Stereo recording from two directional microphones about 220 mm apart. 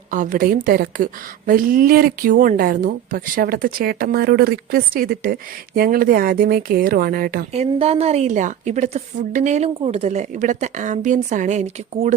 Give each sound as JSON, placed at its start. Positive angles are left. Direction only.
{"t": 0.1, "sound": "speech", "side_deg": -40}
{"t": 7.5, "sound": "speech", "side_deg": -30}